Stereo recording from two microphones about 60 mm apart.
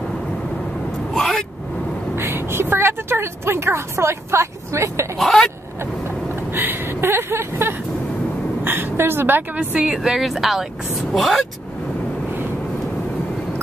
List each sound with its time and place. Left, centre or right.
1.1 s vehicle: centre
2.1 s a sound: right
5.2 s speech: centre
6.5 s vehicle: right
8.6 s a woman's voice: right
10.0 s speech: centre